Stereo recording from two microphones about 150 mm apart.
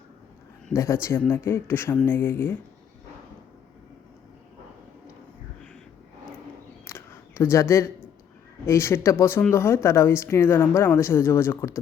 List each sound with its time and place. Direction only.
0.7 s a woman's voice: 20° left (ahead or behind)
6.8 s a sound: 15° left (ahead or behind)
8.6 s a woman's voice: 20° left (ahead or behind)